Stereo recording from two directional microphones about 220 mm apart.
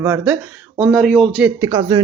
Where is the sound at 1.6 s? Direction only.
15° right (ahead or behind).